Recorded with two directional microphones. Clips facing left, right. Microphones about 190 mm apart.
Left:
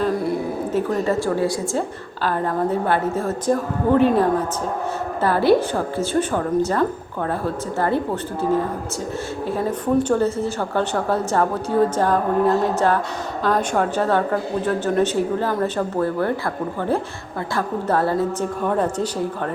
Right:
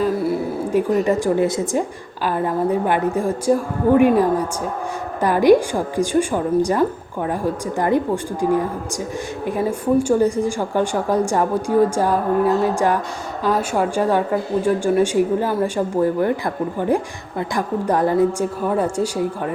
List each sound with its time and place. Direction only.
0.0 s a sound: 5° right (ahead or behind)
2.2 s a woman's voice: 10° right (ahead or behind)
17.5 s a woman's voice: 15° right (ahead or behind)